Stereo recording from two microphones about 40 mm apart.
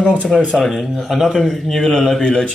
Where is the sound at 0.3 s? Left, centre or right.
Left.